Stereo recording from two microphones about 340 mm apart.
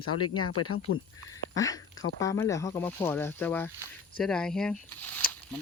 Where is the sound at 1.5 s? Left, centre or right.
Centre.